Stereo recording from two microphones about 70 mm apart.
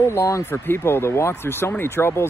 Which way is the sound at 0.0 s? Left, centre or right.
Left.